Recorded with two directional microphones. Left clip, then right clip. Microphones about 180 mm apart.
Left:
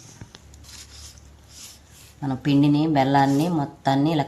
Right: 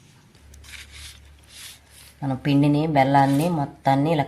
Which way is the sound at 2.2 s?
40° right (ahead or behind).